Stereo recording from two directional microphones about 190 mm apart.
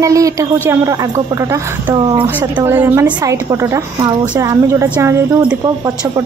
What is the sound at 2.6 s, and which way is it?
A woman's voice, 10° right (ahead or behind).